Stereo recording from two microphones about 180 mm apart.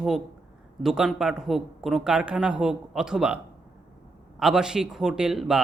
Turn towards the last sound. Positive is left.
turn(degrees=-5)  # may be behind; listen again after turning